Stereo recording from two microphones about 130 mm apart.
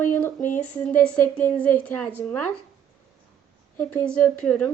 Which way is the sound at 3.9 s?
10° left (ahead or behind).